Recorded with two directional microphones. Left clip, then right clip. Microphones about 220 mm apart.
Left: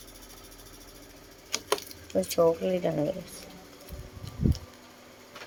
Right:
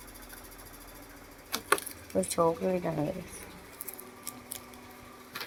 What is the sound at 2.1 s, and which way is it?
Speech, 10° left (ahead or behind).